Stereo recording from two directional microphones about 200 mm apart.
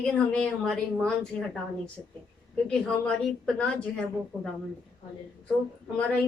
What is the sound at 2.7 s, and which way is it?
Speech, 5° left (ahead or behind).